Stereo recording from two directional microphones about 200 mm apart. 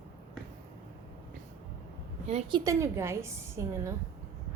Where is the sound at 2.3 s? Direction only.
35° right (ahead or behind).